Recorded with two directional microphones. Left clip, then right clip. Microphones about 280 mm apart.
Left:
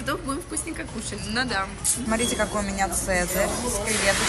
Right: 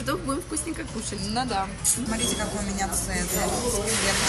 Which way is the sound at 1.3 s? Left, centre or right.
Centre.